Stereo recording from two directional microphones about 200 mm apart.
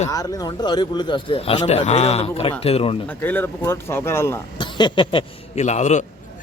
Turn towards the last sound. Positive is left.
turn(degrees=35)  # may be behind; listen again after turning